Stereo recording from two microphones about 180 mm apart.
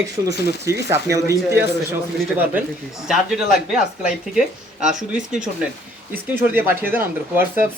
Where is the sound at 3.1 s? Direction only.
Centre (ahead or behind).